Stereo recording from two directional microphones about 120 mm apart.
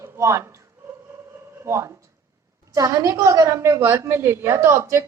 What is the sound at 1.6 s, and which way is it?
A woman's voice, 25° right (ahead or behind).